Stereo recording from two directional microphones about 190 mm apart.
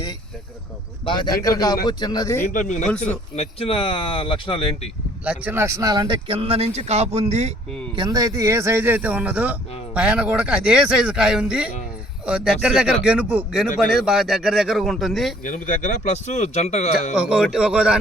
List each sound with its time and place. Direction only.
1.0 s speech: 25° left (ahead or behind)
2.5 s speech: 40° left (ahead or behind)
5.2 s speech: 5° right (ahead or behind); by 7.5 s 35° right (ahead or behind)
7.9 s speech: 20° right (ahead or behind); by 15.4 s centre (ahead or behind)
15.4 s speech: 45° left (ahead or behind)
17.2 s speech: 5° right (ahead or behind)